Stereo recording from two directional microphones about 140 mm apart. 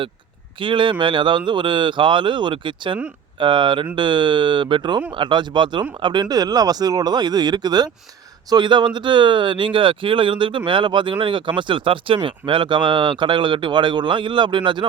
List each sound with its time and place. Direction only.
0.6 s speech: 35° right (ahead or behind)